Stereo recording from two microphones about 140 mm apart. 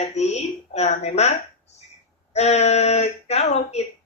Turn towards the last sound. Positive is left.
turn(degrees=50)  # may be behind; listen again after turning